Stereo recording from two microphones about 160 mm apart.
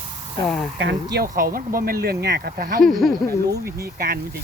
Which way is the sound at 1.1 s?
65° right (ahead or behind).